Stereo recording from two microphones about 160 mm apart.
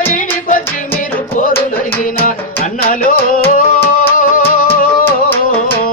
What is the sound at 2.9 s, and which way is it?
Music, 60° left (ahead or behind).